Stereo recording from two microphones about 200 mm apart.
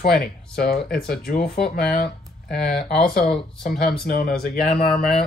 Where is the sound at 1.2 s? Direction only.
50° left (ahead or behind).